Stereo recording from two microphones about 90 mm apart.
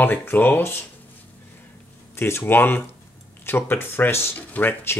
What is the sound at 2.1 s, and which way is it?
Speech, 25° left (ahead or behind).